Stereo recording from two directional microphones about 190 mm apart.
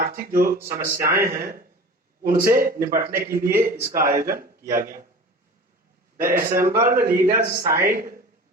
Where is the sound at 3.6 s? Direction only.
50° right (ahead or behind).